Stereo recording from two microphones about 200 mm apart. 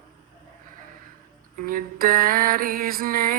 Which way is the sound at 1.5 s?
45° right (ahead or behind).